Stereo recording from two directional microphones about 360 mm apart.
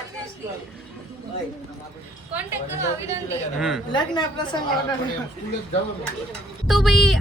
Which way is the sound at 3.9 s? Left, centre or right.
Centre.